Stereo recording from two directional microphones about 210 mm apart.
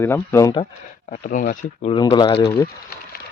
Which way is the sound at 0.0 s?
10° left (ahead or behind).